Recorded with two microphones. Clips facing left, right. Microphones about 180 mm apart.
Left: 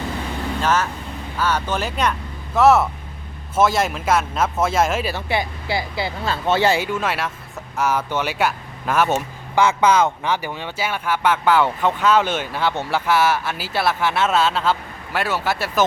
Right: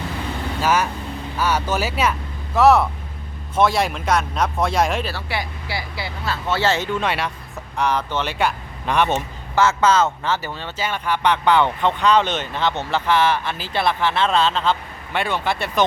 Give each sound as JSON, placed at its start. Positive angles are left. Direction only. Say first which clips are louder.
{"t": 0.6, "sound": "speech", "louder": "right 2 dB", "side_deg": -10}
{"t": 5.1, "sound": "a man's voice", "louder": "left 4 dB", "side_deg": 20}